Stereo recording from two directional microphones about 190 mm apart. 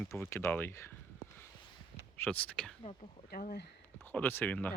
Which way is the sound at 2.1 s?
10° left (ahead or behind).